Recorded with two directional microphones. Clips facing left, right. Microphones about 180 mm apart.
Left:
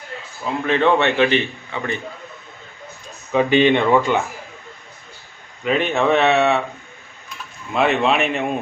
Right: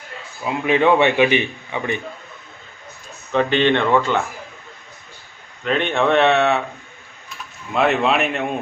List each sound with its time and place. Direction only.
0.4 s a man's voice: 10° right (ahead or behind)
3.3 s speech: 10° left (ahead or behind)
5.6 s speech: 5° left (ahead or behind)
7.7 s speech: centre (ahead or behind)